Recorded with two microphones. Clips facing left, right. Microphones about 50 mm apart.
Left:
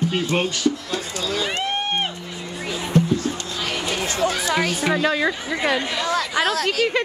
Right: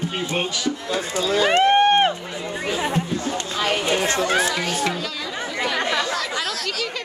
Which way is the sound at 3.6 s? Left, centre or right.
Right.